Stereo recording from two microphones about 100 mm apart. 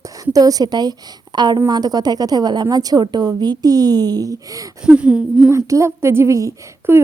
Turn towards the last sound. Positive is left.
turn(degrees=-30)  # may be behind; listen again after turning